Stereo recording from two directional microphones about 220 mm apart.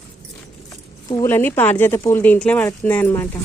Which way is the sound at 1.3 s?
10° left (ahead or behind).